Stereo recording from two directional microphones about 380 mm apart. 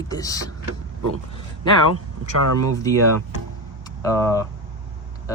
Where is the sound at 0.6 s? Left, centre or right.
Right.